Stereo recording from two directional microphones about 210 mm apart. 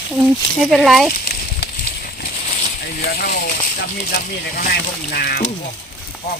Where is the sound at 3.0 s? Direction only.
40° left (ahead or behind).